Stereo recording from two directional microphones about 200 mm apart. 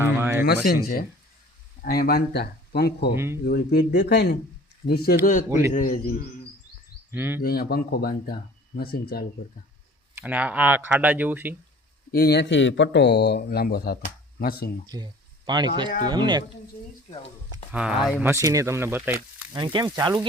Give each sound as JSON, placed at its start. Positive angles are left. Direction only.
{"t": 0.0, "sound": "a sound", "side_deg": -10}
{"t": 0.4, "sound": "speech", "side_deg": 50}
{"t": 5.2, "sound": "a man's voice", "side_deg": 40}
{"t": 7.1, "sound": "speech", "side_deg": -10}
{"t": 7.4, "sound": "speech", "side_deg": 50}
{"t": 10.2, "sound": "speech", "side_deg": -10}
{"t": 12.1, "sound": "speech", "side_deg": 55}
{"t": 14.8, "sound": "speech", "side_deg": -20}
{"t": 17.7, "sound": "speech", "side_deg": -5}
{"t": 18.3, "sound": "speech", "side_deg": -15}
{"t": 19.5, "sound": "speech", "side_deg": -20}